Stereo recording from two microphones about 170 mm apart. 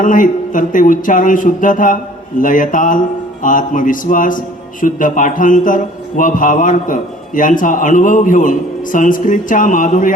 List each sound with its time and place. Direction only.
0.0 s a man's voice: 50° left (ahead or behind)